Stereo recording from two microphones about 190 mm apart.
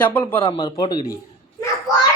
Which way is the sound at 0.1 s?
10° left (ahead or behind).